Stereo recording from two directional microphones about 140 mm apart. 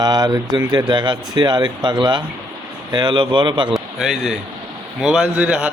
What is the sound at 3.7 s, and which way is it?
A man's voice, centre (ahead or behind).